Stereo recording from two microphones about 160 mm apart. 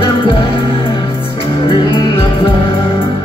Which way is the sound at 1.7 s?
30° left (ahead or behind).